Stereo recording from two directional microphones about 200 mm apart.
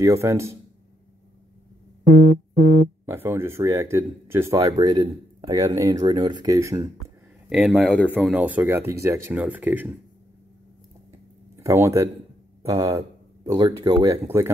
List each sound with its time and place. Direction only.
0.0 s speech: 15° right (ahead or behind)
3.1 s speech: 10° right (ahead or behind)
7.4 s speech: 5° right (ahead or behind)
11.6 s speech: 15° right (ahead or behind)